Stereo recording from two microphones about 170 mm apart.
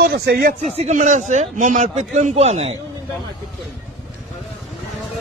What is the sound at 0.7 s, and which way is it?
A man's voice, 45° right (ahead or behind).